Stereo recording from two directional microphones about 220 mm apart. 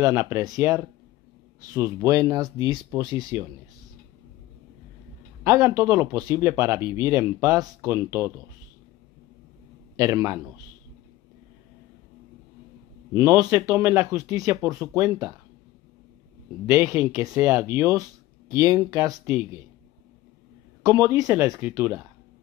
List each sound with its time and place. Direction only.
0.0 s speech: 10° right (ahead or behind)
2.0 s speech: 15° right (ahead or behind)
5.4 s speech: 10° right (ahead or behind)
9.9 s speech: 15° right (ahead or behind)
13.1 s speech: 15° right (ahead or behind)
16.6 s speech: 10° right (ahead or behind)
20.8 s speech: 15° right (ahead or behind)